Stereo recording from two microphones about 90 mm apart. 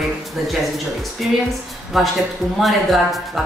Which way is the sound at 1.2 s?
10° right (ahead or behind).